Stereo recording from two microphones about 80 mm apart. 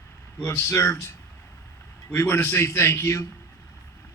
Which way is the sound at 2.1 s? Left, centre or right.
Left.